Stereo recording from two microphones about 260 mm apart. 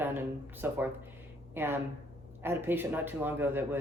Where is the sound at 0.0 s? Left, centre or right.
Centre.